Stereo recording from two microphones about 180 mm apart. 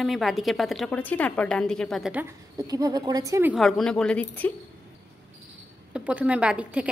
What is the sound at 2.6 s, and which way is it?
Speech, 20° right (ahead or behind).